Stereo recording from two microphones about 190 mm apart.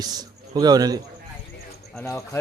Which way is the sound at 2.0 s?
15° left (ahead or behind).